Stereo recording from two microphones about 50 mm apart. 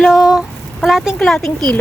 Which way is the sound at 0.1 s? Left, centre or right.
Centre.